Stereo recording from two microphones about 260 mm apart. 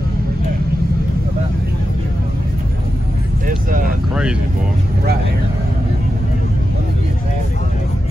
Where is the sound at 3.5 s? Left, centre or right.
Right.